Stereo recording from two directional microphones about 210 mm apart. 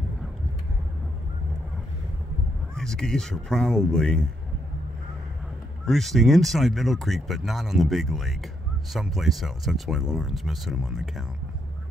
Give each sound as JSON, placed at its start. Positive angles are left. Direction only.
{"t": 2.7, "sound": "speech", "side_deg": 0}
{"t": 5.9, "sound": "speech", "side_deg": 0}